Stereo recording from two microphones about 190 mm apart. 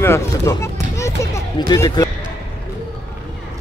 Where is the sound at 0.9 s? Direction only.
15° left (ahead or behind).